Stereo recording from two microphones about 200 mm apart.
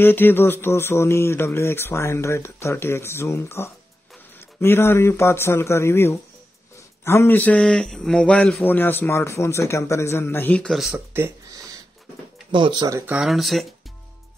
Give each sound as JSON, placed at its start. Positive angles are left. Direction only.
{"t": 0.0, "sound": "a man's voice", "side_deg": 10}
{"t": 11.1, "sound": "a sound", "side_deg": -15}
{"t": 12.4, "sound": "speech", "side_deg": -25}
{"t": 13.1, "sound": "speech", "side_deg": 0}